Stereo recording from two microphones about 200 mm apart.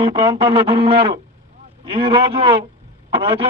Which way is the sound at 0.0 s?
25° right (ahead or behind).